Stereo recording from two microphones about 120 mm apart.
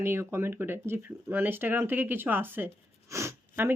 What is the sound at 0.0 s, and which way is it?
Speech, 20° right (ahead or behind).